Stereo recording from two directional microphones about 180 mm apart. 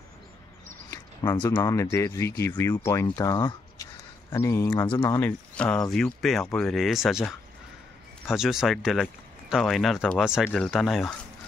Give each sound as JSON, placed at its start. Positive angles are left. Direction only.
{"t": 0.8, "sound": "a sound", "side_deg": 20}
{"t": 1.4, "sound": "speech", "side_deg": 15}
{"t": 5.2, "sound": "speech", "side_deg": 5}
{"t": 8.3, "sound": "speech", "side_deg": -5}